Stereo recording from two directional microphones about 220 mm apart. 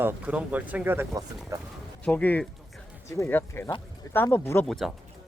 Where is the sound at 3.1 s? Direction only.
10° left (ahead or behind).